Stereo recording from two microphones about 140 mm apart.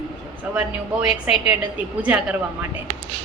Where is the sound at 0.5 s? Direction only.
10° right (ahead or behind).